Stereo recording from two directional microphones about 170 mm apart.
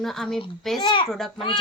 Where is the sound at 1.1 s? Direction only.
Centre (ahead or behind).